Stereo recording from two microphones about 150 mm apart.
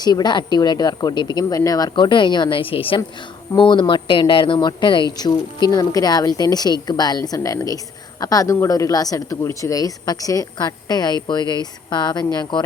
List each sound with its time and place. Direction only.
0.0 s a woman's voice: 25° left (ahead or behind)